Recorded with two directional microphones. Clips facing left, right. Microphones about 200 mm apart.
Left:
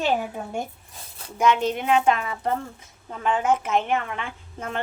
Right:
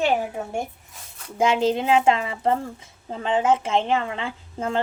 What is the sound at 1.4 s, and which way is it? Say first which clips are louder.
A woman's voice: right 2 dB; 25° right (ahead or behind).